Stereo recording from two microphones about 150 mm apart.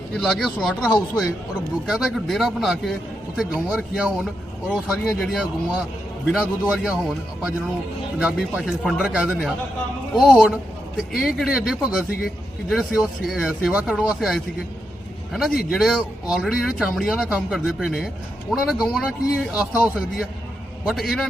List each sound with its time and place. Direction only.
0.1 s speech: 5° left (ahead or behind)